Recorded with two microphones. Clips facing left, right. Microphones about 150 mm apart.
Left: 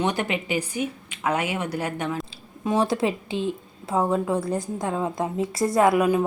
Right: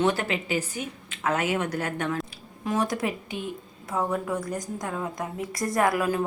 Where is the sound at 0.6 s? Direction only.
15° left (ahead or behind).